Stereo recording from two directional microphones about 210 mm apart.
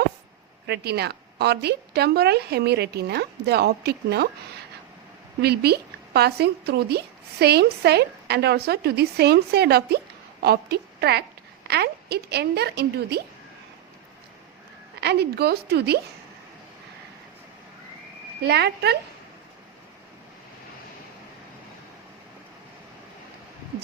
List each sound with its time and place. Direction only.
0.7 s a woman's voice: 50° right (ahead or behind)
5.4 s a woman's voice: 50° right (ahead or behind)
15.0 s a woman's voice: 50° right (ahead or behind)
18.4 s a woman's voice: 50° right (ahead or behind)